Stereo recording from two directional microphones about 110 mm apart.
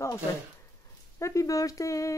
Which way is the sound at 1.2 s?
30° left (ahead or behind).